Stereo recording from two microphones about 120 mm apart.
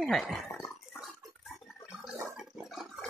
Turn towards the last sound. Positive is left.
turn(degrees=0)  # may be behind; listen again after turning